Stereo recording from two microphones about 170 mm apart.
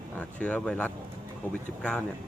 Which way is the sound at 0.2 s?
10° left (ahead or behind).